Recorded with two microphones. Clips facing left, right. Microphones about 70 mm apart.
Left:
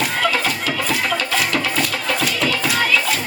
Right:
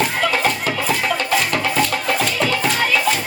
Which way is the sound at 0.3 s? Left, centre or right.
Right.